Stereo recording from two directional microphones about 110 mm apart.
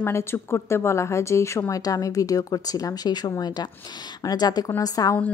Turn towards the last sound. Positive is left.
turn(degrees=35)  # may be behind; listen again after turning